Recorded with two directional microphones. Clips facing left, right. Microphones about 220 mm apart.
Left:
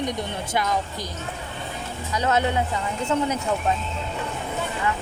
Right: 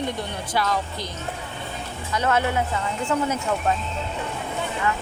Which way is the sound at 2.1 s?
15° left (ahead or behind).